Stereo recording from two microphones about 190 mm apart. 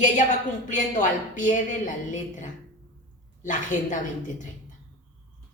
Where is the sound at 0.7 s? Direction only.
40° left (ahead or behind).